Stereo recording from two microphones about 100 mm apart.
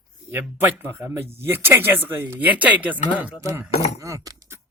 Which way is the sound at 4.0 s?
35° right (ahead or behind).